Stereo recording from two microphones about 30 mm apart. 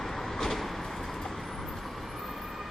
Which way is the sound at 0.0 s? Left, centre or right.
Centre.